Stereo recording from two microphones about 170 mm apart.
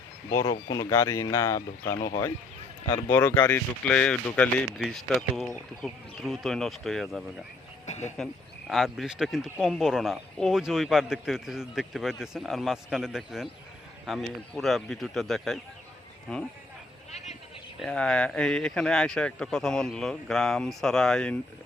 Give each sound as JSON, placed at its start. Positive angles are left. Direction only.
{"t": 0.7, "sound": "a man's voice", "side_deg": 15}
{"t": 7.9, "sound": "speech", "side_deg": 40}
{"t": 8.1, "sound": "a man's voice", "side_deg": 0}
{"t": 17.7, "sound": "a man's voice", "side_deg": 5}